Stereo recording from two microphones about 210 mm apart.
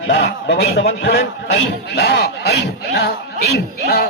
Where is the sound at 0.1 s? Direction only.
55° left (ahead or behind).